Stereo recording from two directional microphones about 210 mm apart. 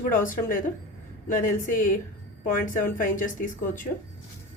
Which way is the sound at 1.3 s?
40° left (ahead or behind).